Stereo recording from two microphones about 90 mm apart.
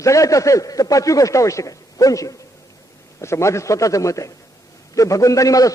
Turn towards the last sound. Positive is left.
turn(degrees=40)  # may be behind; listen again after turning